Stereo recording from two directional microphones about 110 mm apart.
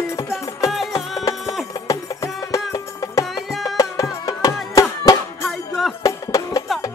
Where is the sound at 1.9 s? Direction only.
30° left (ahead or behind).